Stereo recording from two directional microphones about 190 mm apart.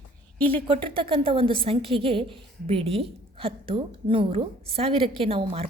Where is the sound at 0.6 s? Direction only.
25° right (ahead or behind).